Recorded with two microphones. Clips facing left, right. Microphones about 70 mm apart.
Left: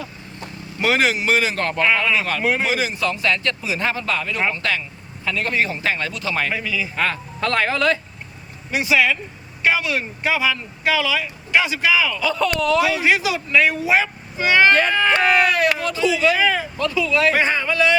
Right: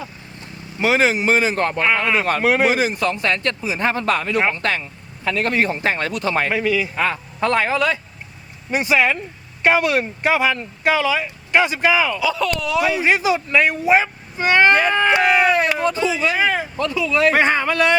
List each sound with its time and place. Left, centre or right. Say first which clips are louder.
0.8 s speech: right 2 dB; centre; by 2.4 s right
2.4 s speech: right 4 dB; right
2.6 s speech: right 3 dB; right
6.1 s speech: right 5 dB; right
6.3 s speech: right 5 dB; right
6.9 s speech: right 1 dB; centre
8.7 s speech: right 1 dB; right
12.2 s speech: left 1 dB; centre
13.1 s speech: right 2 dB; right
14.7 s speech: right 1 dB; centre
15.4 s speech: right 2 dB; right
17.3 s speech: right 2 dB; right